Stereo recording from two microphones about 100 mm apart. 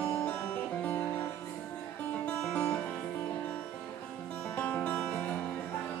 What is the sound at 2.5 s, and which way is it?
Music, 15° left (ahead or behind).